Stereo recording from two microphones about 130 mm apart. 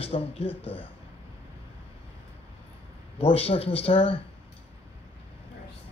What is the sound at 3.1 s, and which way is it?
Speech, 50° left (ahead or behind).